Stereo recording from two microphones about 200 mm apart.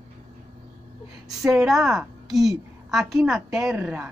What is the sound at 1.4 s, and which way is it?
A woman's voice, 5° right (ahead or behind).